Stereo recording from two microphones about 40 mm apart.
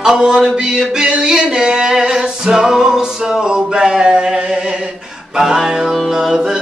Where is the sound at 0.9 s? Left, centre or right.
Right.